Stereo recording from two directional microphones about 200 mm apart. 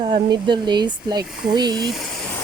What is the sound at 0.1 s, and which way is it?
Speech, 25° right (ahead or behind).